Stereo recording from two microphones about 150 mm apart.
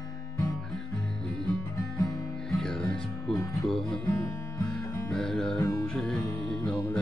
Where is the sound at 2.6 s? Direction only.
5° left (ahead or behind).